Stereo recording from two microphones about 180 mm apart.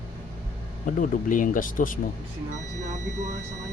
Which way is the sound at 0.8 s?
50° left (ahead or behind).